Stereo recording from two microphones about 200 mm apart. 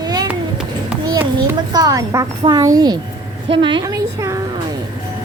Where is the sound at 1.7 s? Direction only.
20° right (ahead or behind).